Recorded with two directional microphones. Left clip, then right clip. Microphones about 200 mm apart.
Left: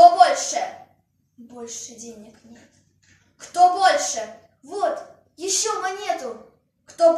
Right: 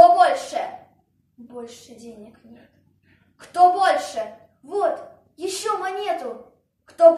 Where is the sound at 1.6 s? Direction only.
15° left (ahead or behind).